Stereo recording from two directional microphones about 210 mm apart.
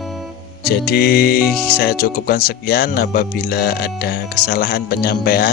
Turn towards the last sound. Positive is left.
turn(degrees=45)  # may be behind; listen again after turning